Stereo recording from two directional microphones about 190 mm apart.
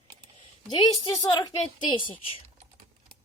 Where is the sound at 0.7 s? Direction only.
20° left (ahead or behind).